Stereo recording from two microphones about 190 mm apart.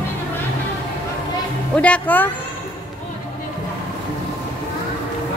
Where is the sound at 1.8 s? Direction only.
10° left (ahead or behind).